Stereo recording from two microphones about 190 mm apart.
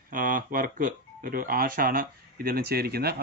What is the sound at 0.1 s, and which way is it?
Speech, 45° right (ahead or behind).